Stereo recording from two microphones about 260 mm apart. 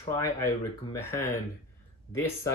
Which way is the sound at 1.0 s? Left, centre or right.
Centre.